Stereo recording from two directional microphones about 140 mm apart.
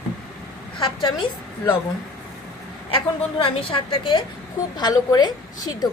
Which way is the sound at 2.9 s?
35° left (ahead or behind).